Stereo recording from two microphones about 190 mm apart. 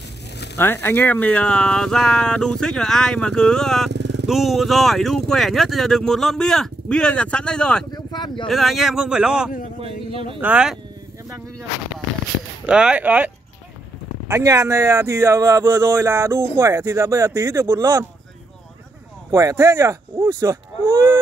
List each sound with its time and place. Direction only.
0.6 s speech: 10° left (ahead or behind)
3.9 s vehicle: 65° right (ahead or behind)
4.3 s speech: centre (ahead or behind)
7.9 s a sound: 25° left (ahead or behind)
8.5 s speech: centre (ahead or behind)
9.8 s a man's voice: 30° right (ahead or behind)
10.4 s speech: 5° right (ahead or behind)
12.6 s speech: 5° right (ahead or behind)
19.3 s speech: 15° right (ahead or behind)